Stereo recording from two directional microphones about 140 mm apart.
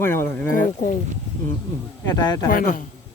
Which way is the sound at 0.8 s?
75° left (ahead or behind).